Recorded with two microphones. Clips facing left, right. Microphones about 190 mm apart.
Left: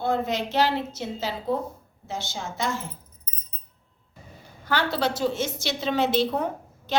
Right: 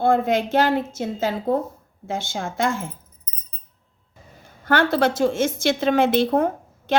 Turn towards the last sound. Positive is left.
turn(degrees=-50)  # may be behind; listen again after turning